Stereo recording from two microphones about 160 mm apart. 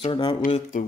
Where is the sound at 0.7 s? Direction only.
55° left (ahead or behind).